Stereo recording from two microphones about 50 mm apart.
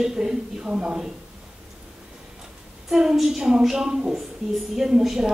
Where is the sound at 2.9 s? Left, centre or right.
Centre.